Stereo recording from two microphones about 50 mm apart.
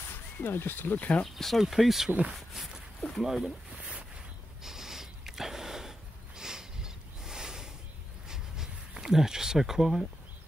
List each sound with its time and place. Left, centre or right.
0.4 s speech: left
0.9 s speech: left
1.3 s speech: centre
2.0 s speech: right
2.3 s speech: centre
4.6 s a sound: centre